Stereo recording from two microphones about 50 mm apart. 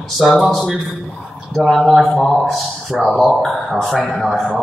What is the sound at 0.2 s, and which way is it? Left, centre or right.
A man's voice, centre.